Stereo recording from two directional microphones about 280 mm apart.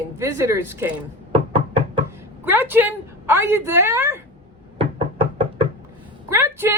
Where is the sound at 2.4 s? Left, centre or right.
Centre.